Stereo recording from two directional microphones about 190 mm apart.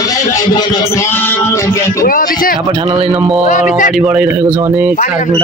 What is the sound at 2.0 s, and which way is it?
Speech, 50° left (ahead or behind).